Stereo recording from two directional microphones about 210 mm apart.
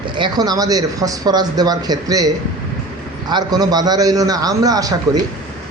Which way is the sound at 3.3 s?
20° right (ahead or behind).